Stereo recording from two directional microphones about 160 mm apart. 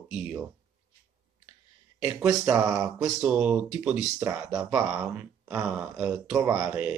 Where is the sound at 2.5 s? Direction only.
20° right (ahead or behind).